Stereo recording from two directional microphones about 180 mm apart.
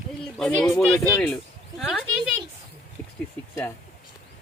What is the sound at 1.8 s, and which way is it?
Speech, centre (ahead or behind).